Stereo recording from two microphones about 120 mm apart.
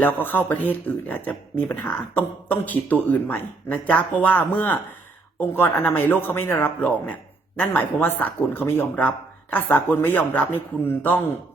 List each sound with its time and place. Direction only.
0.0 s speech: 15° left (ahead or behind)